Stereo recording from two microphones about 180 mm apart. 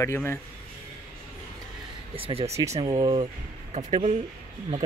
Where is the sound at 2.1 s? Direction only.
30° right (ahead or behind).